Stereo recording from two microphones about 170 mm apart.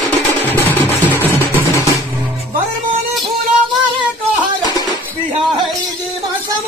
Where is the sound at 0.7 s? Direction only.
10° left (ahead or behind).